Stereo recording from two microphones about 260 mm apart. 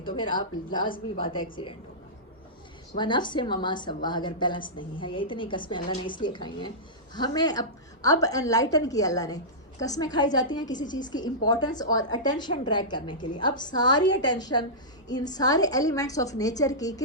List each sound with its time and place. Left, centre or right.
0.2 s a woman's voice: centre
0.9 s a woman's voice: left
1.2 s a woman's voice: centre
3.0 s a woman's voice: centre